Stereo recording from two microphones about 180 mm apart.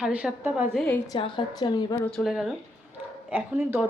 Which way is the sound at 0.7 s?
5° left (ahead or behind).